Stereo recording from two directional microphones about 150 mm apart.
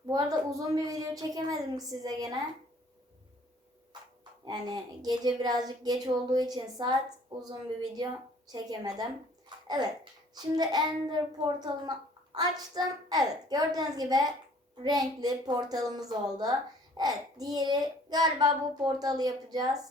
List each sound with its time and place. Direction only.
0.1 s a child's voice: 25° right (ahead or behind)
4.4 s a child's voice: 25° right (ahead or behind)
8.4 s a child's voice: 25° right (ahead or behind)